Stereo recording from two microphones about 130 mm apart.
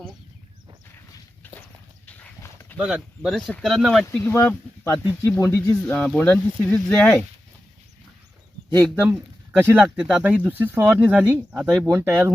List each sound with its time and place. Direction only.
2.0 s horse: 10° left (ahead or behind)
2.4 s dog: 20° left (ahead or behind)
2.7 s speech: 5° right (ahead or behind)
4.2 s speech: 15° left (ahead or behind)
5.8 s speech: 10° left (ahead or behind)
9.0 s speech: 10° right (ahead or behind)
11.9 s speech: 20° right (ahead or behind)